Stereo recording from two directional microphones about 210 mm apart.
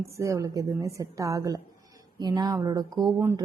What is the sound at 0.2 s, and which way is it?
A woman's voice, 15° right (ahead or behind).